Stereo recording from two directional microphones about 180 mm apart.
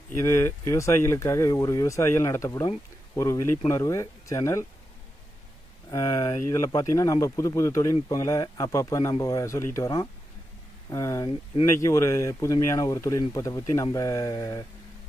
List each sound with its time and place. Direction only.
0.1 s speech: 15° left (ahead or behind)
5.9 s speech: 20° left (ahead or behind)